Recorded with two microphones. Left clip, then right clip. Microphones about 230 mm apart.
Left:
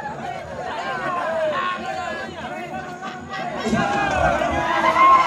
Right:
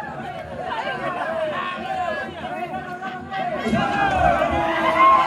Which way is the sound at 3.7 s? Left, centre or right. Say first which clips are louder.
Even; centre.